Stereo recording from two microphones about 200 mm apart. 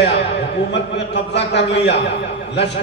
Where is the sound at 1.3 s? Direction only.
60° left (ahead or behind).